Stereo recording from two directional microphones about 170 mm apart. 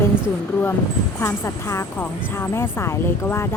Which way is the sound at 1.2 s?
15° left (ahead or behind).